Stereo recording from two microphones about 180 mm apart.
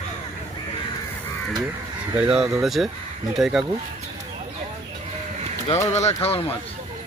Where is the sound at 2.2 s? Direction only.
5° right (ahead or behind).